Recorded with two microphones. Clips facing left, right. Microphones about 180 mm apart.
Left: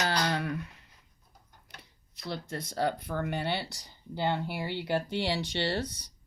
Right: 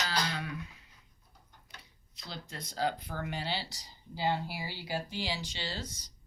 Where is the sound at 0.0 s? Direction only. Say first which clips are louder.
Left 5 dB; 55° left (ahead or behind).